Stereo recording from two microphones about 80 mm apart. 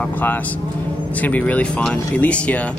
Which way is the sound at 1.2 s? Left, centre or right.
Centre.